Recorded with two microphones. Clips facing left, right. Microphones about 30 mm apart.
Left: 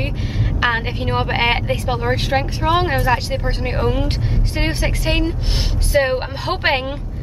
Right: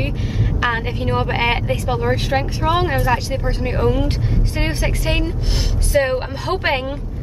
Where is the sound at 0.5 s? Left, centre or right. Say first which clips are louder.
Left 2 dB; centre.